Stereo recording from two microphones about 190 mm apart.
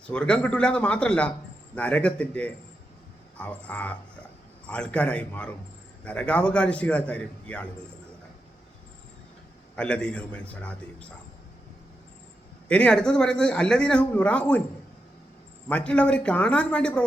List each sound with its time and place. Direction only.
0.1 s a man's voice: 5° left (ahead or behind)
9.7 s a man's voice: 5° left (ahead or behind)
12.6 s a man's voice: 5° left (ahead or behind)
15.7 s a man's voice: 5° left (ahead or behind)